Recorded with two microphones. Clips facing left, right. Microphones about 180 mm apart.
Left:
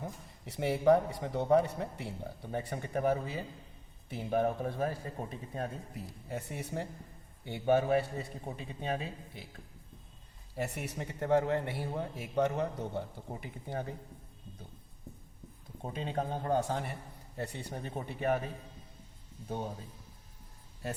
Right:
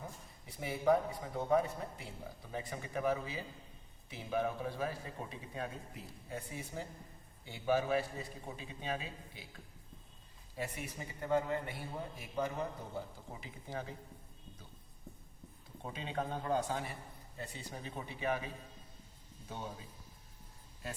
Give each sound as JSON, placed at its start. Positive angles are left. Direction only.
{"t": 0.4, "sound": "a man's voice", "side_deg": 75}
{"t": 6.2, "sound": "a man's voice", "side_deg": 70}
{"t": 7.6, "sound": "a man's voice", "side_deg": 55}
{"t": 10.6, "sound": "a man's voice", "side_deg": 75}
{"t": 15.8, "sound": "a man's voice", "side_deg": 45}
{"t": 17.3, "sound": "a man's voice", "side_deg": 65}